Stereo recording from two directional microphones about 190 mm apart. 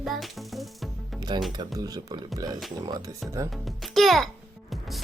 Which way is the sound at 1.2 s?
20° right (ahead or behind).